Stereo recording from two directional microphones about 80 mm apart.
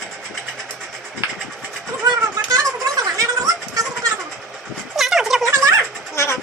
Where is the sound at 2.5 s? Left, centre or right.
Right.